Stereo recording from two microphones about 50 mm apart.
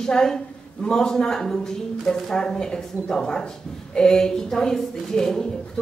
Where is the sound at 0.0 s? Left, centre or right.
Centre.